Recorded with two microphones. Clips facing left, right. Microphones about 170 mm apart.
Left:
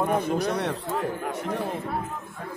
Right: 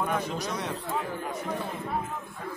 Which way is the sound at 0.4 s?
60° left (ahead or behind).